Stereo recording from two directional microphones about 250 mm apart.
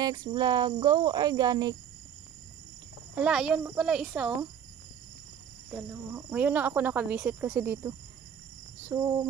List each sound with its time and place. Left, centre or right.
0.0 s speech: centre
3.2 s a child's voice: centre
5.7 s speech: centre